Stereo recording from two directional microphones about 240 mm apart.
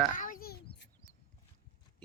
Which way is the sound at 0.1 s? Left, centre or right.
Left.